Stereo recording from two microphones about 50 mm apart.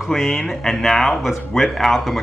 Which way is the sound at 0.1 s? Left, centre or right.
Centre.